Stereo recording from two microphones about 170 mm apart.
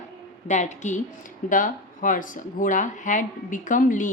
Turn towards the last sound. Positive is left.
turn(degrees=50)  # may be behind; listen again after turning